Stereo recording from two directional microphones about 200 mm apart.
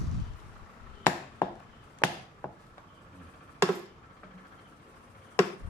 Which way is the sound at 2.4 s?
10° left (ahead or behind).